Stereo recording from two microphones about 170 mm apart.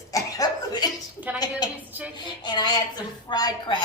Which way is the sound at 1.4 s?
25° left (ahead or behind).